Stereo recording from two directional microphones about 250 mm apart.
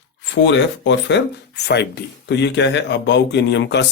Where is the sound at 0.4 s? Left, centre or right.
Left.